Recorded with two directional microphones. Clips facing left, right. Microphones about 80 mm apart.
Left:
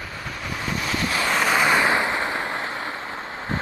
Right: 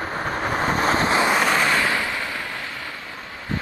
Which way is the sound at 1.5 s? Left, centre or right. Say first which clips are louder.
Left 2 dB; centre.